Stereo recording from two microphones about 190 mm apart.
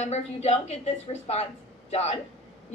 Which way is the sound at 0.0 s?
35° left (ahead or behind).